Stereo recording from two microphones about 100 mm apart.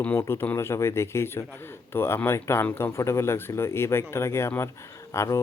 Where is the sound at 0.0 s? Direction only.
20° left (ahead or behind).